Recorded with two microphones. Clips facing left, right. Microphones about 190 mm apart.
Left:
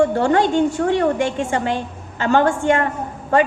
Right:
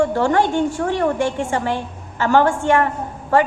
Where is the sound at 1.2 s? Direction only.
15° left (ahead or behind).